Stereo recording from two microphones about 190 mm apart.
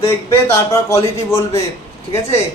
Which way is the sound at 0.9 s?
15° left (ahead or behind).